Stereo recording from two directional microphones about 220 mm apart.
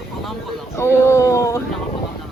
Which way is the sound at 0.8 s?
10° left (ahead or behind).